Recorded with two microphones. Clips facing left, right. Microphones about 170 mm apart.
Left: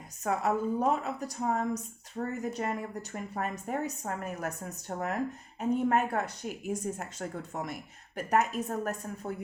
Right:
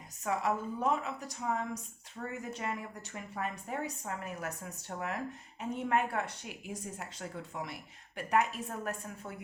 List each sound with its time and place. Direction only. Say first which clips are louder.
0.3 s a woman's voice: left 4 dB; 40° left (ahead or behind)